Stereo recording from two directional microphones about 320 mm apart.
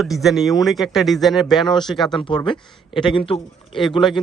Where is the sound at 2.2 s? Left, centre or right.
Centre.